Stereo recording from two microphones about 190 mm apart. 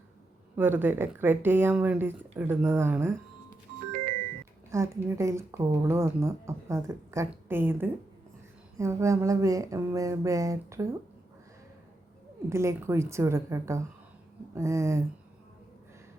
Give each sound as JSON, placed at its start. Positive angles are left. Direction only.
{"t": 0.5, "sound": "a woman's voice", "side_deg": -10}
{"t": 4.7, "sound": "a woman's voice", "side_deg": -15}
{"t": 12.5, "sound": "a woman's voice", "side_deg": -15}